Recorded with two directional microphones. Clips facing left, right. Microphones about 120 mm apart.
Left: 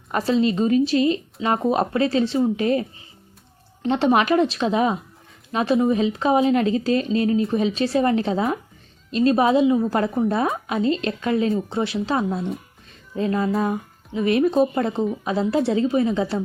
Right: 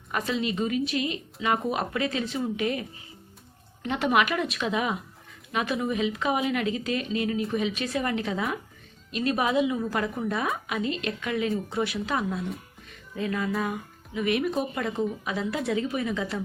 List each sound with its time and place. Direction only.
0.1 s a woman's voice: 35° left (ahead or behind)
3.8 s a woman's voice: 30° left (ahead or behind)